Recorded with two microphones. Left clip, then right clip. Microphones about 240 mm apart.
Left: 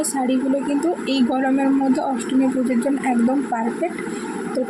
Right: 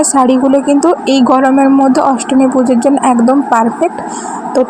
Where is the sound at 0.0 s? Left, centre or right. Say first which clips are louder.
Right 13 dB; right.